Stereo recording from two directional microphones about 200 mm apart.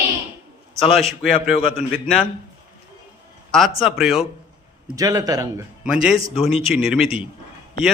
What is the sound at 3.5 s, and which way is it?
Speech, centre (ahead or behind).